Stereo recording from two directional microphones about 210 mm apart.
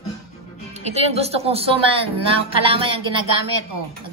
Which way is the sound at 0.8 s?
30° right (ahead or behind).